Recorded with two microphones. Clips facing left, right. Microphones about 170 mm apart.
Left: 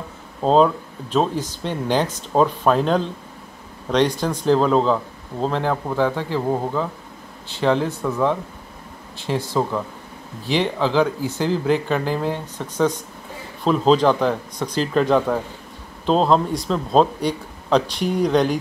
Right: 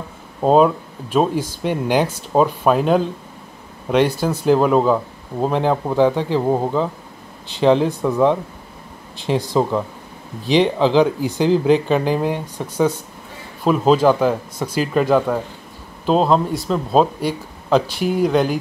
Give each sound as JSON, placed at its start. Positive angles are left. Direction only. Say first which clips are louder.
{"t": 0.4, "sound": "speech", "louder": "right 2 dB", "side_deg": -10}